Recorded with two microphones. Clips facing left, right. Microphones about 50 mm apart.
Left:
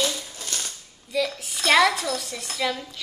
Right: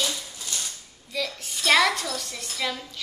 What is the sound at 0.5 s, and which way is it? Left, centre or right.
Cutlery, left.